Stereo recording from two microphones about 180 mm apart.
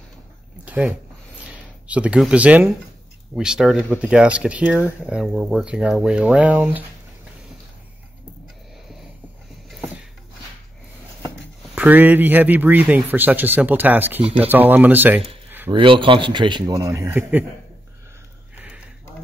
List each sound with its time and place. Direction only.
0.7 s a sound: 10° right (ahead or behind)
1.4 s speech: 5° right (ahead or behind)
11.7 s speech: 10° right (ahead or behind)
15.7 s a man's voice: 30° right (ahead or behind); by 17.5 s 10° right (ahead or behind)